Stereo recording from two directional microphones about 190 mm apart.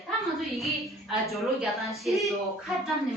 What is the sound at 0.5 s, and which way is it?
A woman's voice, centre (ahead or behind).